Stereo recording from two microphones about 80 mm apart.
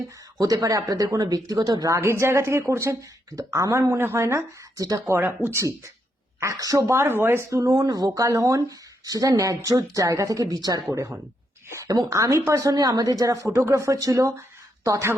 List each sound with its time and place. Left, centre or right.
0.3 s speech: right
2.0 s speech: right
4.9 s speech: right
6.4 s speech: right
7.6 s speech: right
11.9 s speech: right
12.7 s speech: right